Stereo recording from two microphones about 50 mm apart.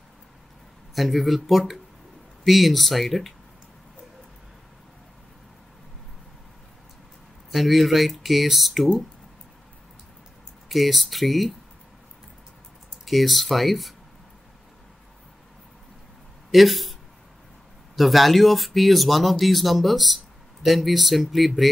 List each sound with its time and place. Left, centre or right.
0.9 s speech: centre
7.5 s speech: centre
10.7 s speech: centre
13.0 s speech: centre
16.5 s speech: centre
17.9 s speech: centre